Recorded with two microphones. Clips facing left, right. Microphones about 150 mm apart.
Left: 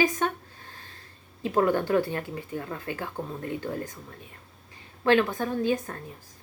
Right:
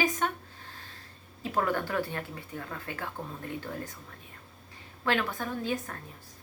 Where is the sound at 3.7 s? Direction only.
15° left (ahead or behind).